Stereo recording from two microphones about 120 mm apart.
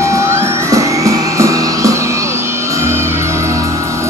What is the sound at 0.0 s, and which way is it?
Music, 25° right (ahead or behind).